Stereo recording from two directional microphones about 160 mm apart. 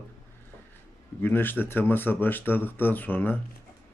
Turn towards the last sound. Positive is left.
turn(degrees=10)  # may be behind; listen again after turning